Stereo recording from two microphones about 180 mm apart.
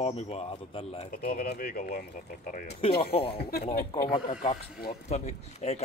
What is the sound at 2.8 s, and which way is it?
Speech, 30° left (ahead or behind).